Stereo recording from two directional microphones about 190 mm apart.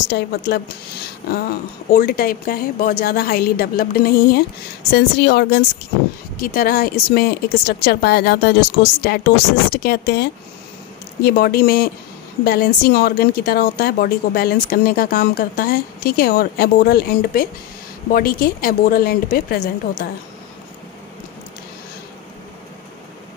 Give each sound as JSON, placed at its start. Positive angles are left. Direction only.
{"t": 0.1, "sound": "speech", "side_deg": 60}
{"t": 1.9, "sound": "a woman's voice", "side_deg": 50}